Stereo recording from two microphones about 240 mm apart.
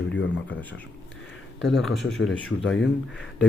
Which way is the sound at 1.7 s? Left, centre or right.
Centre.